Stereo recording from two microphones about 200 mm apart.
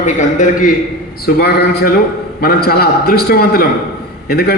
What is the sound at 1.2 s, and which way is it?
A man's voice, 50° left (ahead or behind).